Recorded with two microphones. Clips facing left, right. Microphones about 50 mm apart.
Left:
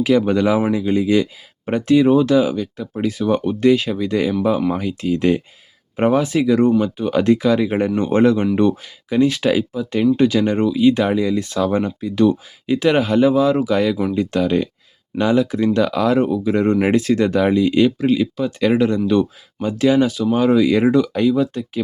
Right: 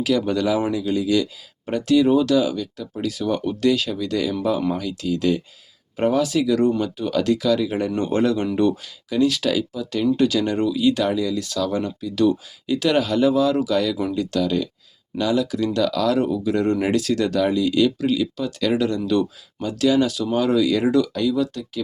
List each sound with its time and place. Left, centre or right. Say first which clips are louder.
0.0 s speech: left 5 dB; left